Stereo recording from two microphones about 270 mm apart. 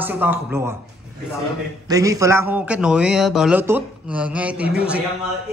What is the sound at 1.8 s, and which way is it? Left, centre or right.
Speech, centre.